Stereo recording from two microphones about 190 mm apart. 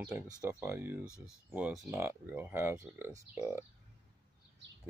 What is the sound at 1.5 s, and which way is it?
Speech, 5° right (ahead or behind).